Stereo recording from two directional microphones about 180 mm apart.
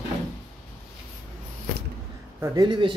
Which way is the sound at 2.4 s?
25° right (ahead or behind).